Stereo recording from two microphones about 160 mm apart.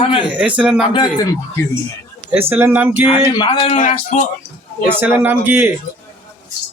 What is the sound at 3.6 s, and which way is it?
Speech, 40° left (ahead or behind).